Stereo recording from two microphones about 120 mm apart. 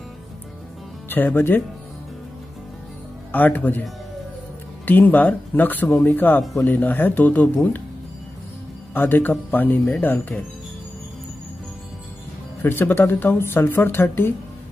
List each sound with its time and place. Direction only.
1.0 s speech: 15° left (ahead or behind)
3.3 s speech: 15° left (ahead or behind)
4.8 s speech: 15° left (ahead or behind)
8.9 s speech: 15° left (ahead or behind)
12.6 s speech: 15° left (ahead or behind)